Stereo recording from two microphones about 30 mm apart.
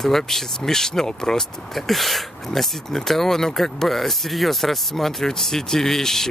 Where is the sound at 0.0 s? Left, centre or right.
Centre.